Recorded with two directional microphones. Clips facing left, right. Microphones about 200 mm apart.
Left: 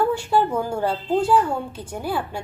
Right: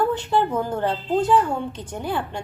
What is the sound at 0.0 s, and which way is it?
A woman's voice, 10° left (ahead or behind).